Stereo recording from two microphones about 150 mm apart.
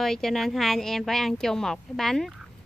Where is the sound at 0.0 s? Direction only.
5° left (ahead or behind).